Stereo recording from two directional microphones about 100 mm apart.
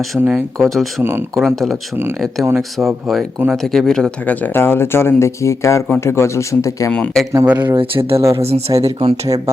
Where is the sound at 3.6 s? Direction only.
5° left (ahead or behind); by 6.9 s 30° left (ahead or behind).